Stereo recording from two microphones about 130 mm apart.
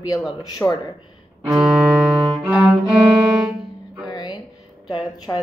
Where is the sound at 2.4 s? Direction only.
5° right (ahead or behind).